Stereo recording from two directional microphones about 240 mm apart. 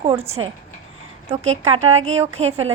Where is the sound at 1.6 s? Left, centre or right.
Right.